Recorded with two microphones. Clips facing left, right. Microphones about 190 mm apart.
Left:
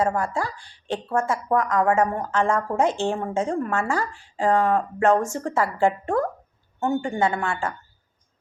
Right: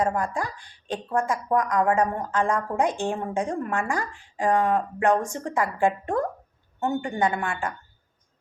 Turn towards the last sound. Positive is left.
turn(degrees=-15)  # may be behind; listen again after turning